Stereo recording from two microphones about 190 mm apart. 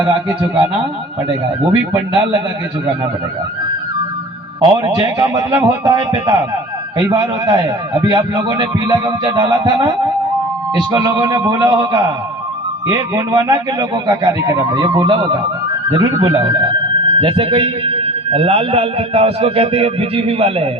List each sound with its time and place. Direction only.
0.0 s a man's voice: 25° right (ahead or behind)
4.6 s a man's voice: 25° right (ahead or behind)
10.9 s a man's voice: 20° right (ahead or behind)